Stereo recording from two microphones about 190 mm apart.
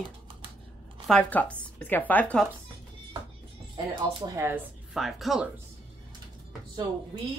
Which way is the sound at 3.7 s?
20° right (ahead or behind).